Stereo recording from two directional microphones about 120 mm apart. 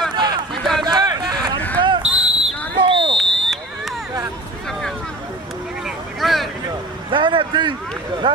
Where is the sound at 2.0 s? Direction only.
10° right (ahead or behind).